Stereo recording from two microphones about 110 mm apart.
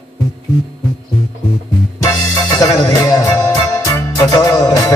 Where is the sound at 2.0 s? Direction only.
35° left (ahead or behind).